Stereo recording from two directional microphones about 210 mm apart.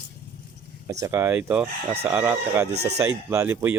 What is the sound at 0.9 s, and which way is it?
Speech, 15° right (ahead or behind).